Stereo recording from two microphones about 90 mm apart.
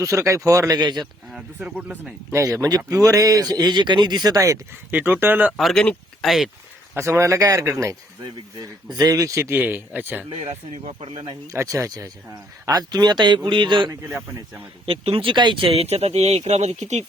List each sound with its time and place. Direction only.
0.0 s speech: 35° right (ahead or behind)
0.8 s speech: 50° right (ahead or behind)
1.5 s speech: 15° right (ahead or behind)
2.3 s speech: 35° right (ahead or behind)
4.9 s speech: 20° right (ahead or behind)
5.5 s speech: centre (ahead or behind)
6.9 s speech: 35° right (ahead or behind)
8.2 s speech: 45° right (ahead or behind)
9.6 s speech: 20° right (ahead or behind)
11.1 s speech: 50° right (ahead or behind)
11.5 s a man's voice: 35° right (ahead or behind); by 13.9 s 60° right (ahead or behind)
14.8 s speech: 85° right